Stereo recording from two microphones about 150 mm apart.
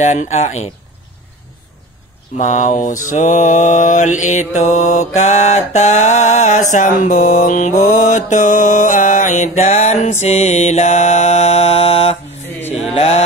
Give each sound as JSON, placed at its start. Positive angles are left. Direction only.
{"t": 0.0, "sound": "mantra", "side_deg": 50}
{"t": 2.3, "sound": "mantra", "side_deg": 55}